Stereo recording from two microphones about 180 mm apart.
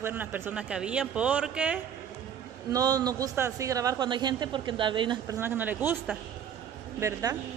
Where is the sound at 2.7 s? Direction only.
20° right (ahead or behind).